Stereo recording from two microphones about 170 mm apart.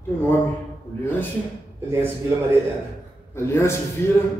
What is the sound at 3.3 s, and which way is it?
Speech, 15° left (ahead or behind).